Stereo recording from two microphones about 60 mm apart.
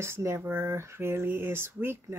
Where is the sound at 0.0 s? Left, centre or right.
Right.